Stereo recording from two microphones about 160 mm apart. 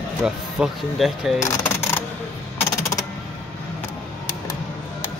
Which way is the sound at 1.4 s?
20° left (ahead or behind).